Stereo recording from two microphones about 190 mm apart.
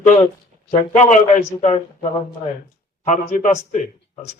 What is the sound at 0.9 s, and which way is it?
A man's voice, 40° left (ahead or behind).